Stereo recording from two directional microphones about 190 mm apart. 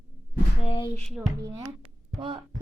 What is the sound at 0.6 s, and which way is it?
Speech, 30° left (ahead or behind).